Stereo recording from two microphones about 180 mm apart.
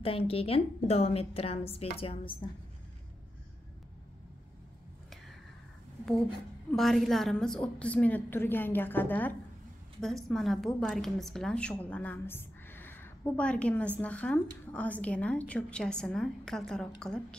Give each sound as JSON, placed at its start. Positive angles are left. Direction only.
{"t": 0.0, "sound": "a woman's voice", "side_deg": 30}
{"t": 6.7, "sound": "a woman's voice", "side_deg": 0}